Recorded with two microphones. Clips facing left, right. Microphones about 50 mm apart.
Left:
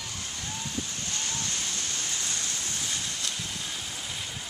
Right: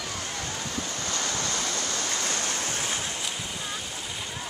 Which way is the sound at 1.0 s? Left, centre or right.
Right.